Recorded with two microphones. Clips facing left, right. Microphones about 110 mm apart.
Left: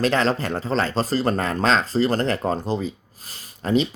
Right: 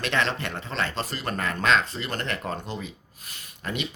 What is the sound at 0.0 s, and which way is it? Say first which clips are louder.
Speech: left 6 dB; 35° left (ahead or behind).